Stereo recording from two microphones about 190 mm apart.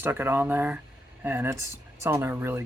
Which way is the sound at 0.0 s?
10° right (ahead or behind).